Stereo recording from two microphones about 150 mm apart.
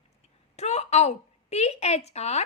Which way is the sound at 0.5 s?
45° left (ahead or behind).